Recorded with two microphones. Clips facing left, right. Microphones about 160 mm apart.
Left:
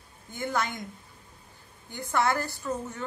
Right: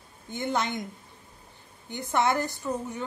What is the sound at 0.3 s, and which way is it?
Speech, 20° right (ahead or behind).